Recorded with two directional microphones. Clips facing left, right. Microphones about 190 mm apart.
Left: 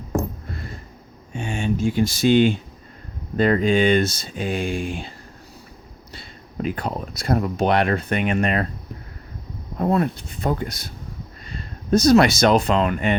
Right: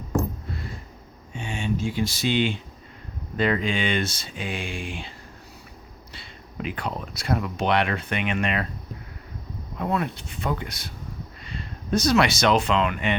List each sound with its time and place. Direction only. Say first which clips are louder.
1.3 s speech: left 4 dB; 50° left (ahead or behind)
6.1 s speech: left 5 dB; 40° left (ahead or behind)
9.7 s speech: left 6 dB; 40° left (ahead or behind)